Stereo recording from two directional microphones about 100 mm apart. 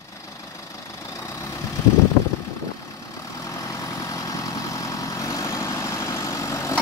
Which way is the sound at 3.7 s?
30° left (ahead or behind).